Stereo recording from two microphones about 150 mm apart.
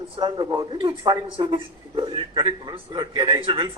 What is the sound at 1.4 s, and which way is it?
A man's voice, 35° right (ahead or behind).